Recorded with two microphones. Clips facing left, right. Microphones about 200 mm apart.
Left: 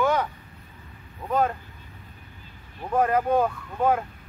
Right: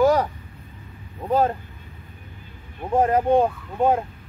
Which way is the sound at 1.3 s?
30° right (ahead or behind).